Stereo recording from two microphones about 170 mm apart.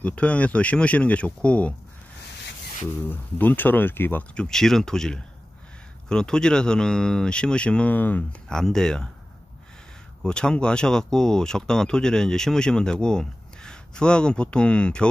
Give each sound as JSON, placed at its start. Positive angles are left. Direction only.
{"t": 0.0, "sound": "speech", "side_deg": 10}
{"t": 3.1, "sound": "speech", "side_deg": 10}
{"t": 10.2, "sound": "speech", "side_deg": 5}